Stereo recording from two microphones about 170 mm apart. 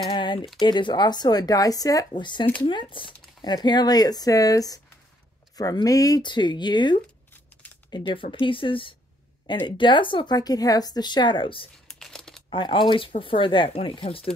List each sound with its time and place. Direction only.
0.1 s speech: 30° left (ahead or behind)
11.9 s crumpling: 5° left (ahead or behind)
12.4 s speech: 30° left (ahead or behind)